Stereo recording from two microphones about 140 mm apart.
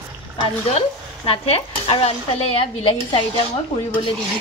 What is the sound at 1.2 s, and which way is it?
Speech, 45° left (ahead or behind).